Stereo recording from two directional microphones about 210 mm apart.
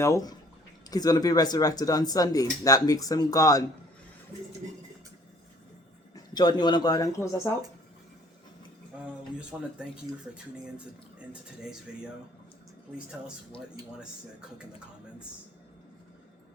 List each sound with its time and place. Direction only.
0.0 s speech: 15° left (ahead or behind)
6.1 s speech: 20° left (ahead or behind)
9.5 s speech: 5° right (ahead or behind)